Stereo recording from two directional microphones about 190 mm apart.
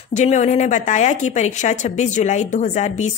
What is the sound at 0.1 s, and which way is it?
A woman's voice, 40° left (ahead or behind).